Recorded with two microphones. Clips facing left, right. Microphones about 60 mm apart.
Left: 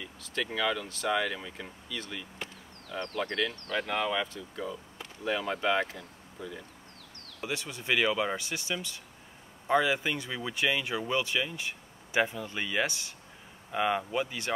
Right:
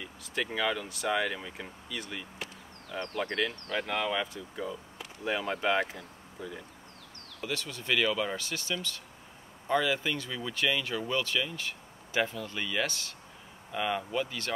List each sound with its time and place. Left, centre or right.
0.0 s a sound: centre
0.5 s speech: centre
7.3 s speech: centre